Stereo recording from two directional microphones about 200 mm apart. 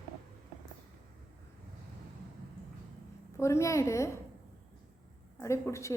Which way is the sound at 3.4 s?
15° left (ahead or behind).